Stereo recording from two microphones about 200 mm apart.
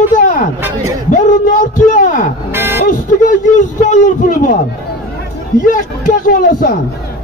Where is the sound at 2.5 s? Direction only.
10° right (ahead or behind).